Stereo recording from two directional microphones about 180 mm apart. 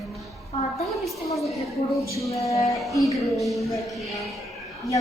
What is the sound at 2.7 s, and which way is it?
Speech, centre (ahead or behind).